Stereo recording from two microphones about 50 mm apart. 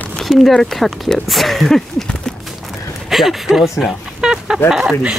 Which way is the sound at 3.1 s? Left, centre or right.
Centre.